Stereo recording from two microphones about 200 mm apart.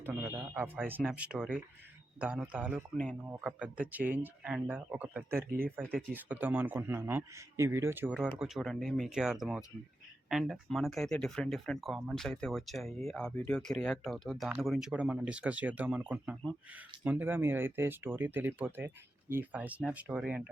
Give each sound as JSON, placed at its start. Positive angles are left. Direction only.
{"t": 0.0, "sound": "a man's voice", "side_deg": -10}
{"t": 5.5, "sound": "speech", "side_deg": -45}
{"t": 6.1, "sound": "a man's voice", "side_deg": -10}